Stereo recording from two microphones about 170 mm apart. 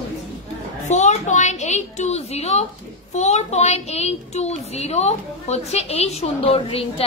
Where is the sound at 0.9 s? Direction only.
45° left (ahead or behind).